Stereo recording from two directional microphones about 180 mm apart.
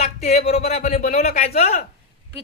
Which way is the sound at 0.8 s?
55° left (ahead or behind).